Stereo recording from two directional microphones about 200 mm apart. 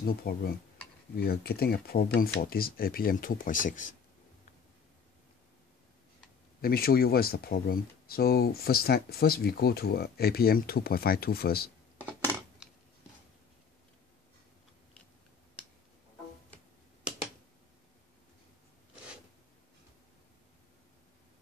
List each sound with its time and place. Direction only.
0.0 s speech: 50° left (ahead or behind)
6.6 s speech: 50° left (ahead or behind)